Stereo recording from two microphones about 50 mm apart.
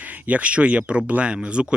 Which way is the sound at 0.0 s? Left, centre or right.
Right.